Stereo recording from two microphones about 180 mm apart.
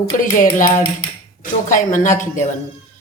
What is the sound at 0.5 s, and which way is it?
A woman's voice, 45° left (ahead or behind).